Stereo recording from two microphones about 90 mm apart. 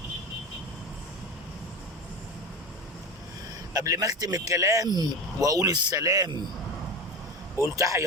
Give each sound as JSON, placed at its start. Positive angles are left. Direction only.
{"t": 3.8, "sound": "speech", "side_deg": -40}
{"t": 7.6, "sound": "speech", "side_deg": -35}